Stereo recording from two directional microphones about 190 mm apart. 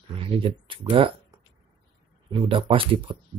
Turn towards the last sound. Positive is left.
turn(degrees=-25)  # may be behind; listen again after turning